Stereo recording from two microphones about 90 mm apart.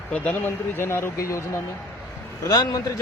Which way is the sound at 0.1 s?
20° left (ahead or behind).